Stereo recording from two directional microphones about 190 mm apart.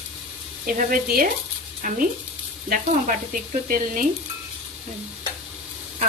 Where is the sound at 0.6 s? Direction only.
45° right (ahead or behind).